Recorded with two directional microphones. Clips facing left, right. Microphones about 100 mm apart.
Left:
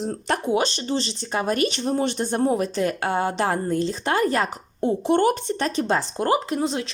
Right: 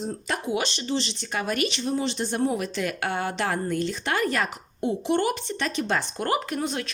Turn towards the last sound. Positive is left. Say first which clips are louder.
# left 4 dB
turn(degrees=25)  # may be behind; listen again after turning